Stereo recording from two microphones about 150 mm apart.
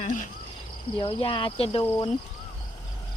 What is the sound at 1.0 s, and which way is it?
Speech, 35° left (ahead or behind).